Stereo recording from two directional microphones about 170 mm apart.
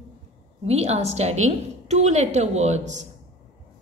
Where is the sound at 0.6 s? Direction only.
40° right (ahead or behind).